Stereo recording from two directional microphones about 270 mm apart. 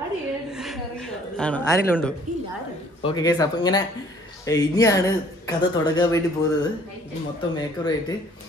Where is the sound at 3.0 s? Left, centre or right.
Centre.